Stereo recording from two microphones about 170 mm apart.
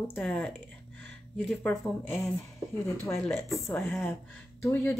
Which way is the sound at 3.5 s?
5° left (ahead or behind).